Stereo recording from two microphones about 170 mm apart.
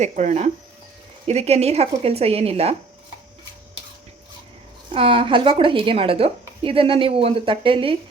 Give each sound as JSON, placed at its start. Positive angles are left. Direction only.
{"t": 0.0, "sound": "a woman's voice", "side_deg": -45}
{"t": 4.9, "sound": "a woman's voice", "side_deg": -30}